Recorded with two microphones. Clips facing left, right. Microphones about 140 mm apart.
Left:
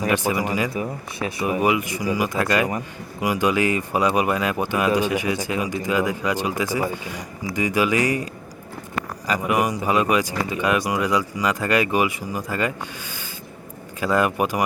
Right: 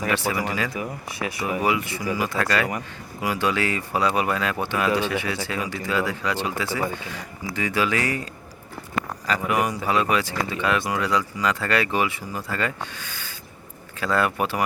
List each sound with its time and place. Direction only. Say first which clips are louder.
0.0 s speech: left 3 dB; 15° left (ahead or behind)